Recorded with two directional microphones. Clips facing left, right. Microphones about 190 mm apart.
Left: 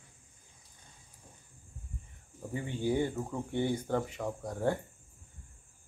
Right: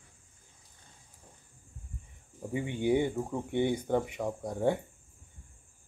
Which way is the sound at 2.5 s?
15° right (ahead or behind).